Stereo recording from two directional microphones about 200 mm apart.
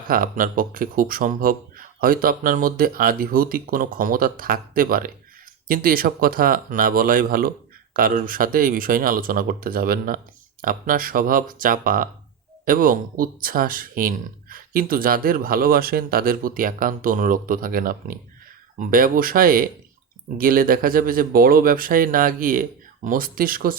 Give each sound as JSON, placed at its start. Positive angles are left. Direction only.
{"t": 0.1, "sound": "speech", "side_deg": -45}